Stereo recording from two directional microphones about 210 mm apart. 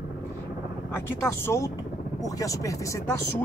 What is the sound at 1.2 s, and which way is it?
Speech, 10° left (ahead or behind).